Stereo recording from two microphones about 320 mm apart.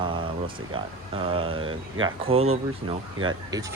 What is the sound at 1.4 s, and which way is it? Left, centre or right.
Speech, right.